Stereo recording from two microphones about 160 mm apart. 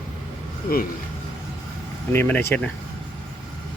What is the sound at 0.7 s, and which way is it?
Speech, 65° left (ahead or behind).